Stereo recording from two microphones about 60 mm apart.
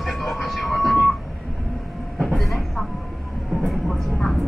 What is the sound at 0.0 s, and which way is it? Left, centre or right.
Vehicle, centre.